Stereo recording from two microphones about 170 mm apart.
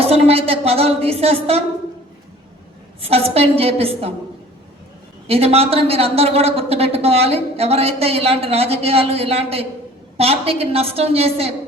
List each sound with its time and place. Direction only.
0.0 s a woman's voice: 35° right (ahead or behind)
3.0 s speech: 35° right (ahead or behind)
5.3 s speech: 35° right (ahead or behind)